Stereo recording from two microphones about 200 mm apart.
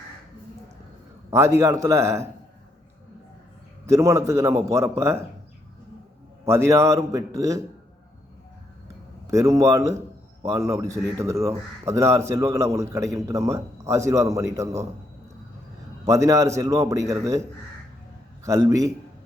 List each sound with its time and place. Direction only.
1.3 s a man's voice: 15° right (ahead or behind)
3.8 s a man's voice: 15° right (ahead or behind)
6.4 s a man's voice: 15° right (ahead or behind)
9.2 s a man's voice: 15° right (ahead or behind)
16.0 s a man's voice: 15° right (ahead or behind)
18.4 s a man's voice: 15° right (ahead or behind)